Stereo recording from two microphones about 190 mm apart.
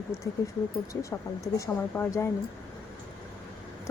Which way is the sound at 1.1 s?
15° left (ahead or behind).